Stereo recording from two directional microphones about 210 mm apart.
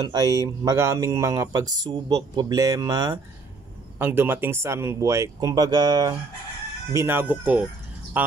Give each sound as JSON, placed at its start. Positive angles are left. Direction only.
{"t": 0.0, "sound": "speech", "side_deg": -20}